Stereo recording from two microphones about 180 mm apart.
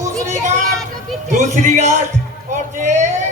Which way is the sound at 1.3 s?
45° right (ahead or behind).